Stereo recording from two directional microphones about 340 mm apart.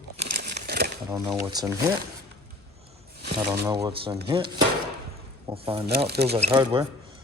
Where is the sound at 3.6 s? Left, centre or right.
Centre.